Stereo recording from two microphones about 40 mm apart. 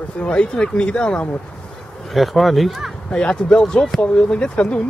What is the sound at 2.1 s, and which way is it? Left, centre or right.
Speech, centre.